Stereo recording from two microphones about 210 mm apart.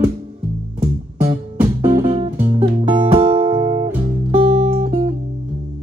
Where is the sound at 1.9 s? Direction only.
25° right (ahead or behind).